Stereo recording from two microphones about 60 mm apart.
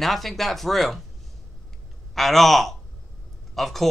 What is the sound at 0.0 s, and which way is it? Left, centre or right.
Speech, centre.